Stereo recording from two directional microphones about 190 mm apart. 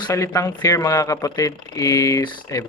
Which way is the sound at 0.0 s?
15° left (ahead or behind).